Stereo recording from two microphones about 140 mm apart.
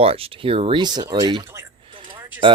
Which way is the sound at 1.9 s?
35° right (ahead or behind).